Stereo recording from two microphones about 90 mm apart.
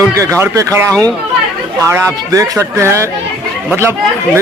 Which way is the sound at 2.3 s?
35° right (ahead or behind).